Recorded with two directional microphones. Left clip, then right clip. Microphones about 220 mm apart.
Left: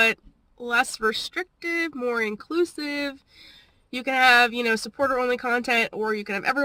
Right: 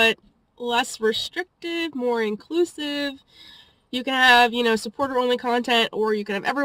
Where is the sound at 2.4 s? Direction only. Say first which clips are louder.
Right 2 dB; 20° right (ahead or behind).